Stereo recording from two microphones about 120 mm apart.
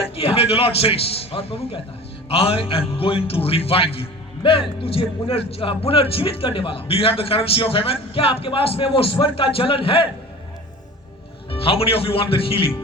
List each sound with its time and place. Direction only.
0.2 s a man's voice: 55° left (ahead or behind)
11.5 s a man's voice: 55° left (ahead or behind)